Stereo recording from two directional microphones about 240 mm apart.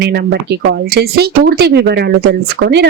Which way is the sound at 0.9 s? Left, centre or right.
Right.